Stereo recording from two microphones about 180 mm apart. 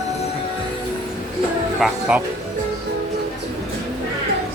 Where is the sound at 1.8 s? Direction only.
5° right (ahead or behind).